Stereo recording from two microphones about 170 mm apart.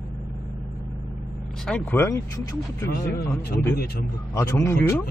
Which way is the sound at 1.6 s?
10° left (ahead or behind).